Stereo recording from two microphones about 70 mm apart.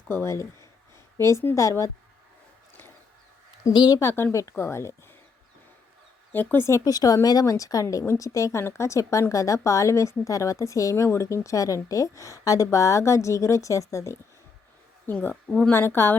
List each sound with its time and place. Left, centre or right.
0.1 s a woman's voice: left
3.8 s speech: left
4.0 s speech: left
6.3 s speech: left
6.7 s a woman's voice: left
6.9 s a woman's voice: left
15.0 s a woman's voice: left
15.7 s speech: left